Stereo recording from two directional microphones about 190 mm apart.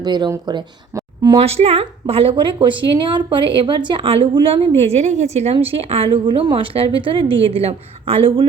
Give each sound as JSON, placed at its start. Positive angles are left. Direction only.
{"t": 0.0, "sound": "a woman's voice", "side_deg": -20}